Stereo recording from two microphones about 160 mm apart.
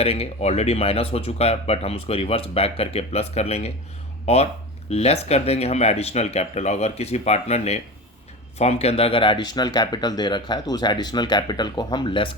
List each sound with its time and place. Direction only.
0.0 s speech: 40° left (ahead or behind)